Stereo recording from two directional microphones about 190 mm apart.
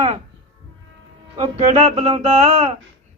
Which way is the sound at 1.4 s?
30° right (ahead or behind).